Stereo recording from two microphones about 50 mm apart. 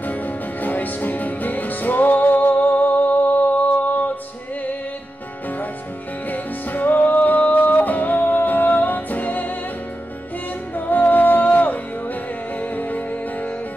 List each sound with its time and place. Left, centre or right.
0.0 s music: left
6.3 s music: left
10.9 s music: left